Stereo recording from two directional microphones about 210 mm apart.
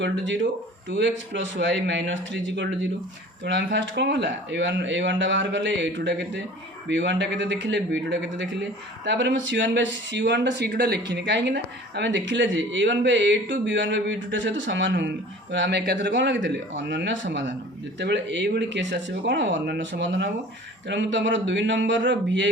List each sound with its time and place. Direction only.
0.0 s speech: 60° right (ahead or behind)